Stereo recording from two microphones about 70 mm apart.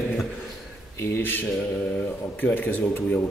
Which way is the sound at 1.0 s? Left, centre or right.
Left.